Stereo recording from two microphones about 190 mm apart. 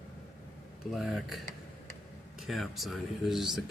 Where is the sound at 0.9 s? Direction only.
Centre (ahead or behind).